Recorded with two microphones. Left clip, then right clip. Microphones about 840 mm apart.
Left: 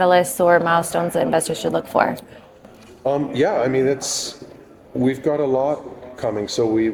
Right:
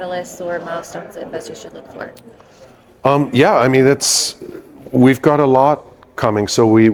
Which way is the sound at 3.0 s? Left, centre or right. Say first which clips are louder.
Right 7 dB; right.